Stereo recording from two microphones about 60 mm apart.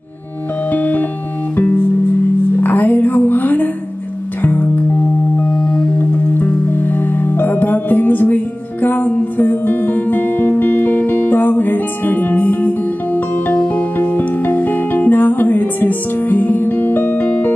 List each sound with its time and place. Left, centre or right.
0.7 s music: left
2.6 s music: left
5.9 s music: left